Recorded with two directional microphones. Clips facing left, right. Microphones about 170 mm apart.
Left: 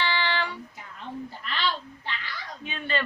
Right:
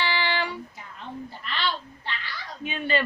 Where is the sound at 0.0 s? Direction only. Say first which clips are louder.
Right 1 dB; 10° right (ahead or behind).